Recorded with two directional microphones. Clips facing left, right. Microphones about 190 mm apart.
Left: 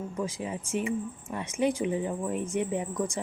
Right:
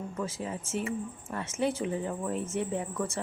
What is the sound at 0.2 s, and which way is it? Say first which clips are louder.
Speech: left 2 dB; 15° left (ahead or behind).